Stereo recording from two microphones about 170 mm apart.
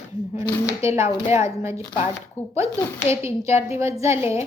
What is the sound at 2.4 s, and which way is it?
Speech, 40° left (ahead or behind).